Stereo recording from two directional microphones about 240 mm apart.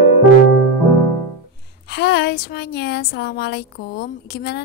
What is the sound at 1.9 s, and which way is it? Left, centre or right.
Speech, left.